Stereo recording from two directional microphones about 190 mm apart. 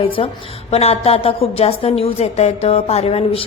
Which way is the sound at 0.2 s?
30° left (ahead or behind).